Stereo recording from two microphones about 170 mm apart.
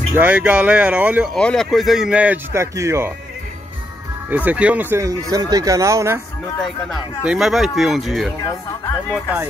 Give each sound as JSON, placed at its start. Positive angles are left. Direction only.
{"t": 0.1, "sound": "speech", "side_deg": -10}
{"t": 1.3, "sound": "speech", "side_deg": 5}
{"t": 4.3, "sound": "speech", "side_deg": -10}
{"t": 7.2, "sound": "speech", "side_deg": 0}